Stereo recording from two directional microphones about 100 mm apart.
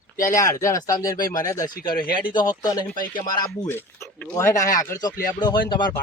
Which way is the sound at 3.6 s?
20° left (ahead or behind).